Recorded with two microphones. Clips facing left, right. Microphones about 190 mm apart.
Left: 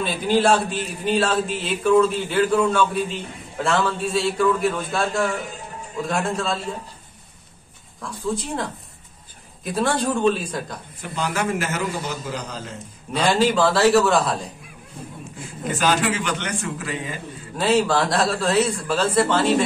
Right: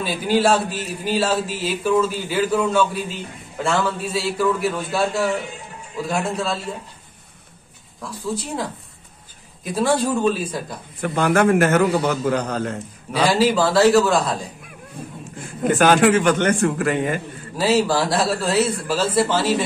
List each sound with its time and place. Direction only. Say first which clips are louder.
0.0 s a man's voice: right 1 dB; 5° right (ahead or behind)
8.0 s a man's voice: left 1 dB; centre (ahead or behind)
11.0 s a man's voice: right 8 dB; 55° right (ahead or behind)
13.3 s a man's voice: even; centre (ahead or behind)
15.6 s a man's voice: right 7 dB; 55° right (ahead or behind)
17.6 s a man's voice: right 1 dB; 5° right (ahead or behind)